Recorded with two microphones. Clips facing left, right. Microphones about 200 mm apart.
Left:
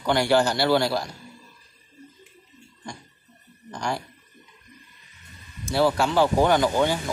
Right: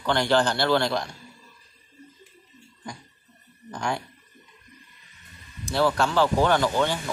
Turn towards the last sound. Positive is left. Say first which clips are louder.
# left 2 dB
turn(degrees=15)  # may be behind; listen again after turning